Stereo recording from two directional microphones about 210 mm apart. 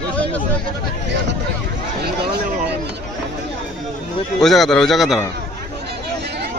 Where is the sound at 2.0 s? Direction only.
50° right (ahead or behind).